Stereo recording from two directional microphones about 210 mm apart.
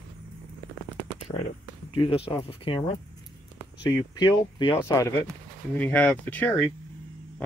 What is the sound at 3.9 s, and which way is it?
Speech, 20° left (ahead or behind).